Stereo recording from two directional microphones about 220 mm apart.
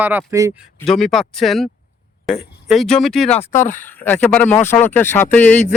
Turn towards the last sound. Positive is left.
turn(degrees=10)  # may be behind; listen again after turning